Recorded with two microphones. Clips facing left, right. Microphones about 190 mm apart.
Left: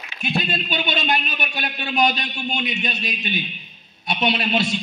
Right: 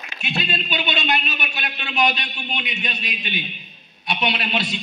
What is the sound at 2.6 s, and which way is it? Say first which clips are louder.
Speech: left 4 dB; 45° left (ahead or behind).